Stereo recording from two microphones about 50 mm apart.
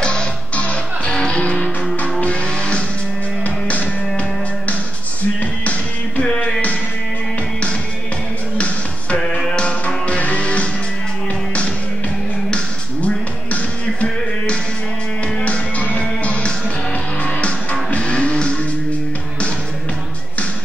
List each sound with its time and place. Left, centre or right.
0.0 s music: centre
5.4 s music: left
6.2 s music: centre
8.5 s tap: left
9.2 s music: centre
12.4 s music: left